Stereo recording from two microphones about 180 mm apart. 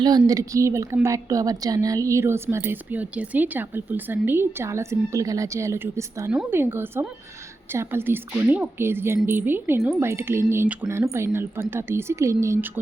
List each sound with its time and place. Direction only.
0.0 s speech: 20° right (ahead or behind)